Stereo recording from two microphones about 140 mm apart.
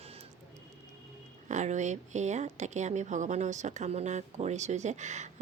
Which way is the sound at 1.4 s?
60° right (ahead or behind).